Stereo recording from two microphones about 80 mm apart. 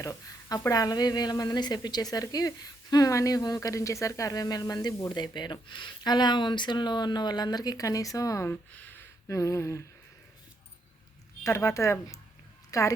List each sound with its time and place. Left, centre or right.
0.0 s a woman's voice: left
8.4 s a sound: left
9.3 s speech: left
11.4 s speech: left